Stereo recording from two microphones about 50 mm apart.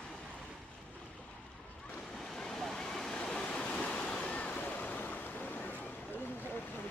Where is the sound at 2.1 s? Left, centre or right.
Centre; by 6.3 s left.